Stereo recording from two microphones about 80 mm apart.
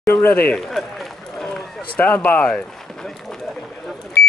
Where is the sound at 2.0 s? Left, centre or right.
Left; by 4.1 s centre.